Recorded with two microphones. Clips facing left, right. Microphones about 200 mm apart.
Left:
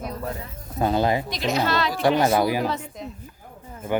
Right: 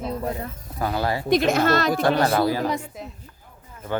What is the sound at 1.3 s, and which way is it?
Speech, 55° right (ahead or behind).